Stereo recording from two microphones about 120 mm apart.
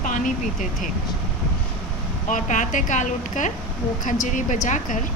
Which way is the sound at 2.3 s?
90° left.